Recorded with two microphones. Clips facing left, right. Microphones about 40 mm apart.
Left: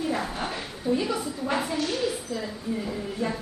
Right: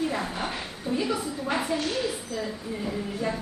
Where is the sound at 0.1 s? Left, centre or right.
Centre.